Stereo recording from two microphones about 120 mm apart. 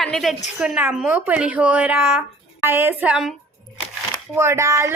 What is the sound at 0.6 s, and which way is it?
Speech, 10° right (ahead or behind).